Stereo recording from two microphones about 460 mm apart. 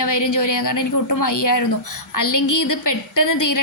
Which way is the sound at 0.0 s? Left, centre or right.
Left.